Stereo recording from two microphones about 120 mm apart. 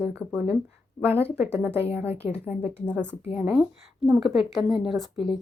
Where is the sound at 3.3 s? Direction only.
5° right (ahead or behind).